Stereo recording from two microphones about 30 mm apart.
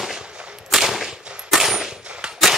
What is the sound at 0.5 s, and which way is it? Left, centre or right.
Gunshot, centre.